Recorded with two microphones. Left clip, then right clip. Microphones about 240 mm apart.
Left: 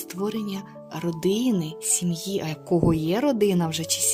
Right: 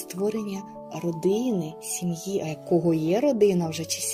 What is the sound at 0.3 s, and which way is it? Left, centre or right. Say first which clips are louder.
Speech: right 2 dB; left.